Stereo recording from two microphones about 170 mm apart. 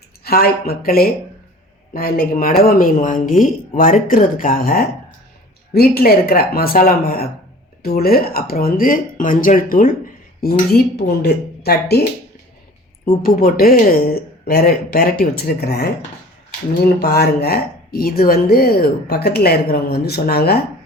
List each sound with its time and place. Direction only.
0.3 s speech: 60° left (ahead or behind)
11.2 s speech: 70° left (ahead or behind)
13.1 s speech: 60° left (ahead or behind)